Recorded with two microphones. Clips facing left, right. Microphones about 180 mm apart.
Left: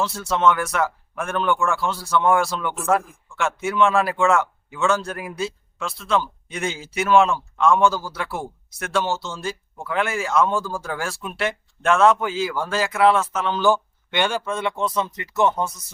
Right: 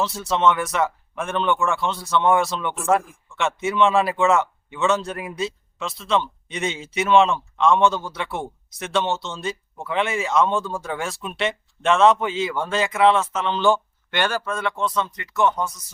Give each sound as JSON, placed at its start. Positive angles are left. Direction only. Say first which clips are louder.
{"t": 0.0, "sound": "a man's voice", "louder": "even", "side_deg": 0}